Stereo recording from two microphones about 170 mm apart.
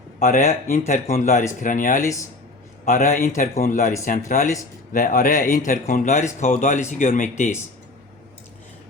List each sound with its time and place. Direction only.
0.2 s speech: 55° left (ahead or behind)
2.0 s speech: 20° left (ahead or behind)
2.8 s a man's voice: 55° left (ahead or behind)